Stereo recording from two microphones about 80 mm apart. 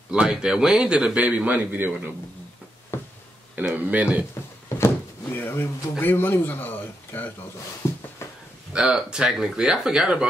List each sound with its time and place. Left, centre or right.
0.1 s a man's voice: centre
2.9 s a sound: left
3.5 s speech: right
4.7 s speech: left
7.8 s a sound: left
8.7 s a man's voice: centre